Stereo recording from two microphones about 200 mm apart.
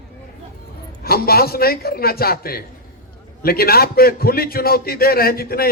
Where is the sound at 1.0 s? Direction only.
50° left (ahead or behind).